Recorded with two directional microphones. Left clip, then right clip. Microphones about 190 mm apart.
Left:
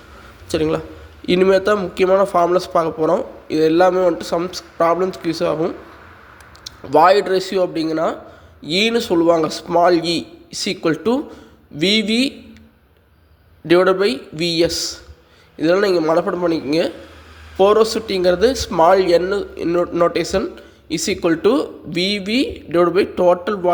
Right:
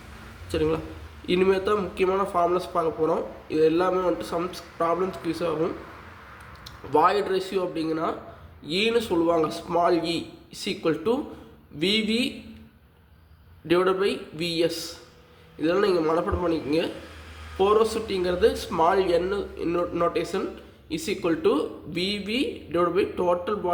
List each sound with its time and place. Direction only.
0.5 s speech: 40° left (ahead or behind)
13.7 s speech: 40° left (ahead or behind)